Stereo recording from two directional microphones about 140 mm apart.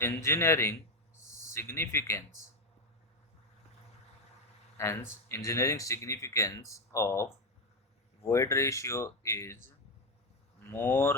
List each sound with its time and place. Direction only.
0.0 s speech: 20° left (ahead or behind)
4.8 s speech: 20° left (ahead or behind)